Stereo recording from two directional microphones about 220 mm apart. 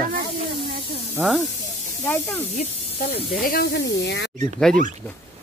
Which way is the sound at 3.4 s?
45° left (ahead or behind).